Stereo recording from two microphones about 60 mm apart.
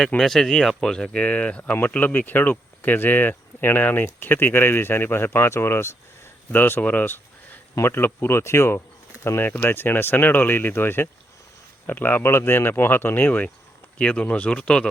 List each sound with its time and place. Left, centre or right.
0.2 s speech: centre; by 8.8 s left
9.4 s speech: left; by 14.8 s centre